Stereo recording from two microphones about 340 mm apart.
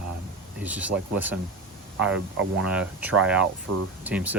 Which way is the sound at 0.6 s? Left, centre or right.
Centre.